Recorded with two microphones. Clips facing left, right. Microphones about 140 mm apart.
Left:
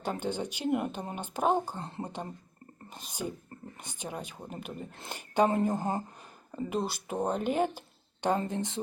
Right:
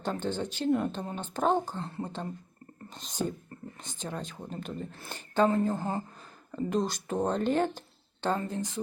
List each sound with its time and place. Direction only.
0.0 s speech: 10° left (ahead or behind)
1.8 s speech: 20° left (ahead or behind)
8.4 s speech: 20° left (ahead or behind)